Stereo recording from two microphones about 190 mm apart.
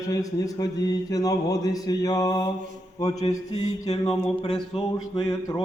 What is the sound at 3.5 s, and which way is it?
Mantra, 35° left (ahead or behind).